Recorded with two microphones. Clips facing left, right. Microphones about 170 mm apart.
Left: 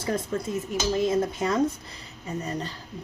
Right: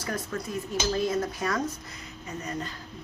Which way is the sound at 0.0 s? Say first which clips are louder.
Left 5 dB; 25° left (ahead or behind).